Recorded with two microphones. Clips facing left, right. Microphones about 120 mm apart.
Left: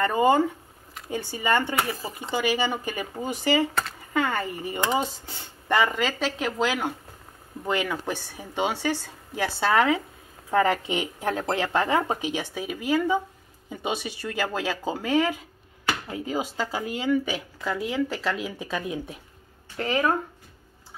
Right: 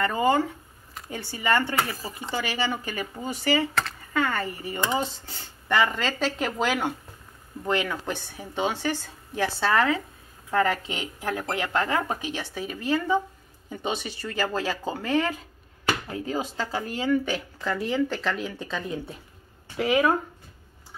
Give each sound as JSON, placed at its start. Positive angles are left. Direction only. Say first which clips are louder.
{"t": 0.0, "sound": "speech", "louder": "left 2 dB", "side_deg": 20}
{"t": 19.8, "sound": "speech", "louder": "right 2 dB", "side_deg": -5}